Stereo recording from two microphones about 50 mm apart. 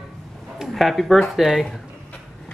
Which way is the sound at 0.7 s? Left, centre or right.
Centre.